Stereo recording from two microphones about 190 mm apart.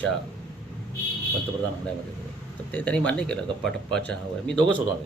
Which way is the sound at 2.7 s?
5° left (ahead or behind).